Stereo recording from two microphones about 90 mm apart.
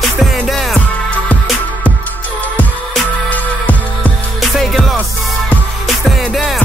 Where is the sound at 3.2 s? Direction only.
15° left (ahead or behind).